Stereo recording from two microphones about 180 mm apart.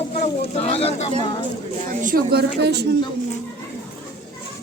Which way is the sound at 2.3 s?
65° right (ahead or behind).